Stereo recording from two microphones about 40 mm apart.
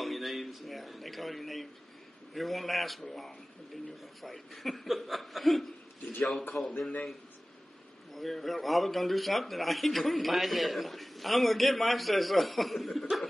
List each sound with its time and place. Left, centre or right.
0.0 s a sound: centre
2.3 s a man's voice: centre
4.2 s a man's voice: centre
6.5 s a man's voice: left
8.1 s a man's voice: centre